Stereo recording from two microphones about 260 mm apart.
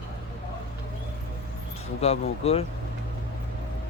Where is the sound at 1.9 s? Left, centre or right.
Left.